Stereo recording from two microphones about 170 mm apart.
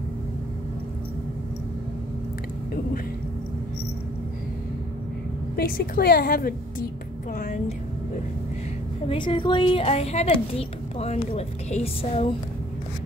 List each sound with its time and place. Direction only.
5.6 s a woman's voice: 60° left (ahead or behind)
7.3 s vehicle: 45° left (ahead or behind)
9.0 s a woman's voice: 30° left (ahead or behind)